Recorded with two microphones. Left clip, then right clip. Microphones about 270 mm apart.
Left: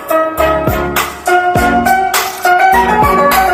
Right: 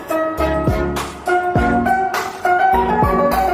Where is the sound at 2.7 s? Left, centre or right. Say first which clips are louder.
Left 6 dB; left.